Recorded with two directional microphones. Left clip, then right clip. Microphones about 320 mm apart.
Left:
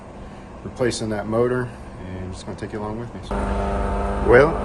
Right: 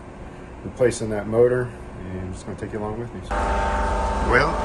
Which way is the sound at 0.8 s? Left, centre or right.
Centre.